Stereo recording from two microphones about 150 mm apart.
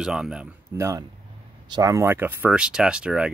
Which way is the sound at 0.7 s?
20° right (ahead or behind).